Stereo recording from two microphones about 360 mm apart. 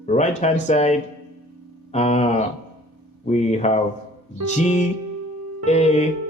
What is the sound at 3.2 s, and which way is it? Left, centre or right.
Speech, centre.